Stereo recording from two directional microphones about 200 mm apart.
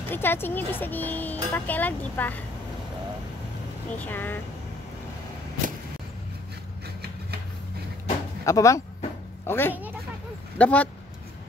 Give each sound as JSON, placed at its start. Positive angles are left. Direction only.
{"t": 0.1, "sound": "speech", "side_deg": 10}
{"t": 3.9, "sound": "speech", "side_deg": 10}
{"t": 8.5, "sound": "speech", "side_deg": 15}